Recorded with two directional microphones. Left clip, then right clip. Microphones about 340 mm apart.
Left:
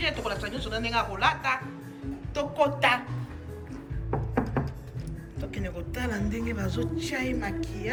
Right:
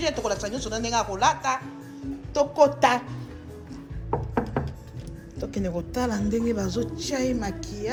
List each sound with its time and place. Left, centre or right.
0.0 s speech: centre
5.4 s speech: centre